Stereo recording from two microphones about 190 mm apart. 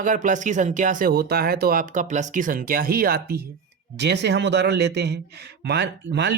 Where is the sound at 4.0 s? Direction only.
65° right (ahead or behind).